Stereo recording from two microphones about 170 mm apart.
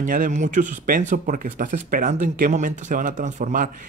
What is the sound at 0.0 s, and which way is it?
Speech, 55° right (ahead or behind).